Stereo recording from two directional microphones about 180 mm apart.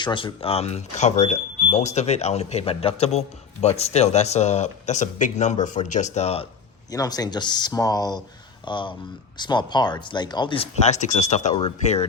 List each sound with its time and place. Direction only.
0.0 s speech: 25° left (ahead or behind)
6.9 s speech: 20° left (ahead or behind); by 11.5 s 40° left (ahead or behind)